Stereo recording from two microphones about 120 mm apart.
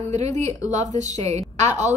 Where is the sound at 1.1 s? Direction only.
70° right (ahead or behind).